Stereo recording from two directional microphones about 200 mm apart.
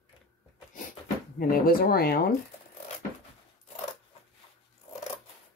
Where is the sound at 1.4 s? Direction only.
45° left (ahead or behind).